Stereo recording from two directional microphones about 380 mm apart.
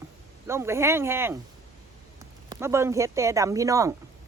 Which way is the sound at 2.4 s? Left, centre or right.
Centre.